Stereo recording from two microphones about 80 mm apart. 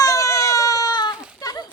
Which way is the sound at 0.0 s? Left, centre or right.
Left.